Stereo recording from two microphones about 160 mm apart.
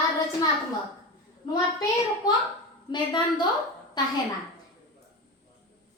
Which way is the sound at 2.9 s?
30° left (ahead or behind).